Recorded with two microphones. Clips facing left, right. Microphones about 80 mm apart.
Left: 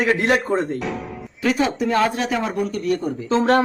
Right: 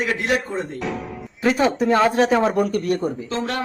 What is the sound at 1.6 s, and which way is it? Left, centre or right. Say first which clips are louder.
Speech: right 2 dB; right.